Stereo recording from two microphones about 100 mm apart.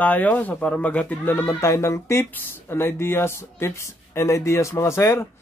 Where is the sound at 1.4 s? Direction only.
30° left (ahead or behind).